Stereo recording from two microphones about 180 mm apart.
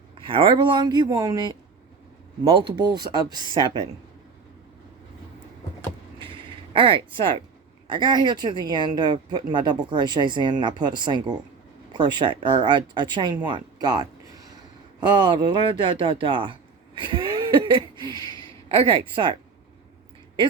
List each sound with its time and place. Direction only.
0.2 s speech: 30° right (ahead or behind)
2.4 s speech: 30° right (ahead or behind)
6.7 s speech: 30° right (ahead or behind)
17.0 s a sound: 25° right (ahead or behind)
18.2 s a sound: 20° left (ahead or behind)
18.7 s speech: 30° right (ahead or behind)